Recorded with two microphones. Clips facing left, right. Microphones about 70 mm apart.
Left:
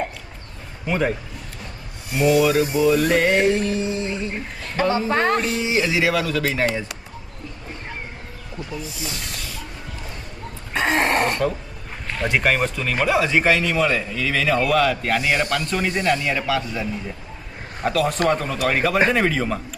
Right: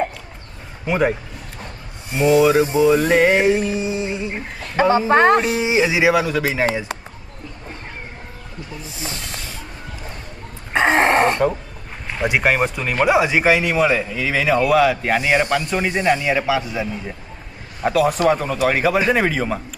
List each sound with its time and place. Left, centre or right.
0.9 s a man's voice: centre
2.0 s a sound: right
4.8 s speech: right
5.5 s a man's voice: right
8.8 s snake: right
10.7 s a sound: right
12.0 s a man's voice: centre